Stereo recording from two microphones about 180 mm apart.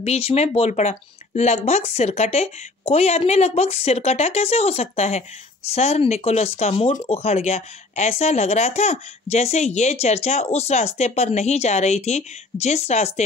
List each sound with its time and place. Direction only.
0.0 s speech: 35° left (ahead or behind)